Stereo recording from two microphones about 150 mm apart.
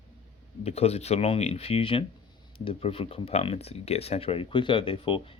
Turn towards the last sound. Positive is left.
turn(degrees=35)  # may be behind; listen again after turning